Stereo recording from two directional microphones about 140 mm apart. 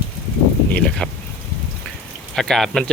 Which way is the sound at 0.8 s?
5° left (ahead or behind).